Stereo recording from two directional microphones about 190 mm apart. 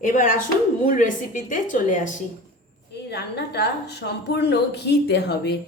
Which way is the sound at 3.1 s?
60° left (ahead or behind).